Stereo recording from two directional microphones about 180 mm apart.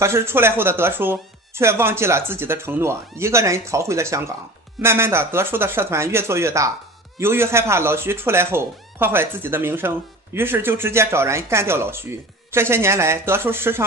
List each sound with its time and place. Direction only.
0.0 s speech: 15° right (ahead or behind)